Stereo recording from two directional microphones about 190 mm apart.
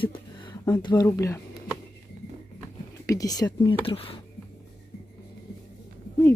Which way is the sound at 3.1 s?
20° left (ahead or behind).